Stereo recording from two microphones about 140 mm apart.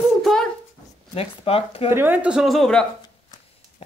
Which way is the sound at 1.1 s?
45° left (ahead or behind).